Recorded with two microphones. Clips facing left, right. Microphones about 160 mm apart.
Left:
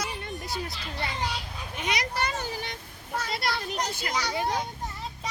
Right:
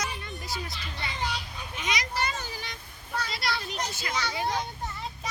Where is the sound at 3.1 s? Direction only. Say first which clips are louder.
Left 2 dB; 50° left (ahead or behind).